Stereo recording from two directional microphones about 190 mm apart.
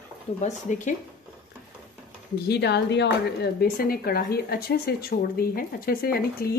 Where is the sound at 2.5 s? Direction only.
60° left (ahead or behind).